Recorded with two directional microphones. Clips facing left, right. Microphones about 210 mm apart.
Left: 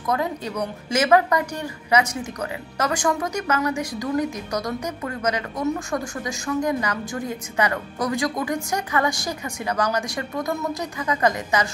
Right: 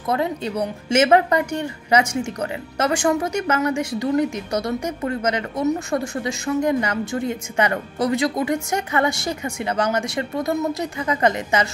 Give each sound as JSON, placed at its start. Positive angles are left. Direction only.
{"t": 0.0, "sound": "a woman's voice", "side_deg": -25}